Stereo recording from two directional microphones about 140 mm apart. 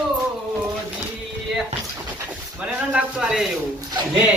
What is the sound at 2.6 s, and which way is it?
Speech, 5° right (ahead or behind).